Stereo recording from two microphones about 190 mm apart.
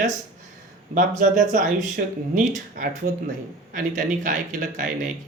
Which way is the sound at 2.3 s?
45° right (ahead or behind).